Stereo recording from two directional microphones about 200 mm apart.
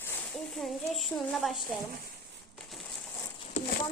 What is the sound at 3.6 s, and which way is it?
Horse, 35° left (ahead or behind).